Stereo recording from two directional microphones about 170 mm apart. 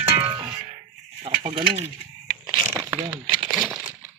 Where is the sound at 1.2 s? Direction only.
35° right (ahead or behind).